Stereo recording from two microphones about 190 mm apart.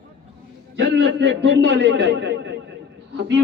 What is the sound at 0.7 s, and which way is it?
A man's voice, 75° right (ahead or behind).